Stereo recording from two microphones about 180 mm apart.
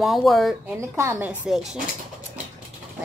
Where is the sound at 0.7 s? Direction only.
15° right (ahead or behind).